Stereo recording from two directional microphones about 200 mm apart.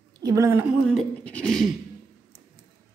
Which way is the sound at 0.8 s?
5° left (ahead or behind).